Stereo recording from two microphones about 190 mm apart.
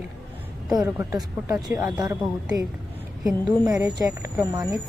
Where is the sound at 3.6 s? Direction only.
20° right (ahead or behind).